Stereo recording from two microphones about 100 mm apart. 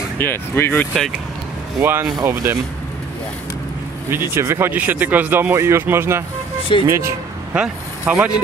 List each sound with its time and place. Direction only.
0.2 s speech: 20° left (ahead or behind)
1.8 s speech: 20° right (ahead or behind)
4.1 s speech: 25° right (ahead or behind)
7.5 s speech: 10° right (ahead or behind)